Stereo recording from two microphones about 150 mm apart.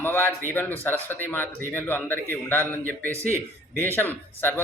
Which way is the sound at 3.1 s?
15° right (ahead or behind).